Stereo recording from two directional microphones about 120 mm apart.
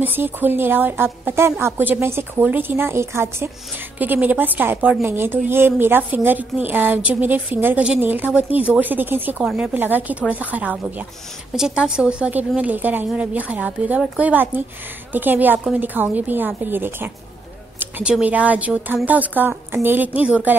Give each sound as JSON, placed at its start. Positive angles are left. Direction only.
{"t": 0.0, "sound": "a woman's voice", "side_deg": -15}
{"t": 17.7, "sound": "a sound", "side_deg": -15}
{"t": 18.1, "sound": "a woman's voice", "side_deg": -10}